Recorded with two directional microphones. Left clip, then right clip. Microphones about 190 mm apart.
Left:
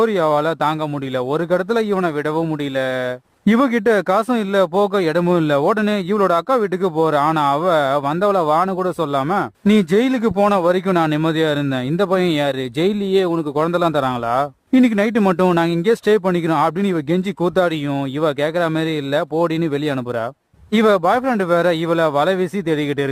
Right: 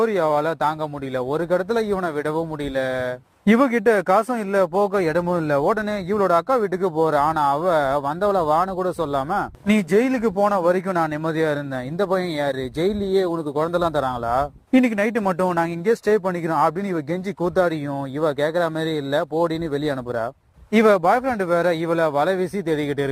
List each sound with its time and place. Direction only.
0.0 s speech: 25° left (ahead or behind)
18.2 s speech: 25° left (ahead or behind)
20.7 s speech: 25° left (ahead or behind)